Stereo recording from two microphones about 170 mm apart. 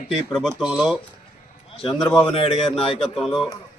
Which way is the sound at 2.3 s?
35° left (ahead or behind).